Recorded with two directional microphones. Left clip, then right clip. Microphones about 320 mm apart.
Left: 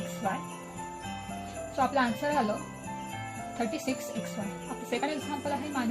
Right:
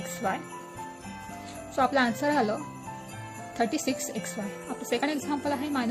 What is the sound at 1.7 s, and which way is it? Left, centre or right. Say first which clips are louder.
Speech: right 3 dB; right.